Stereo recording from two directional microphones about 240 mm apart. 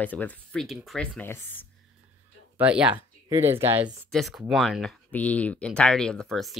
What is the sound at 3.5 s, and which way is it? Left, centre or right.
Speech, centre.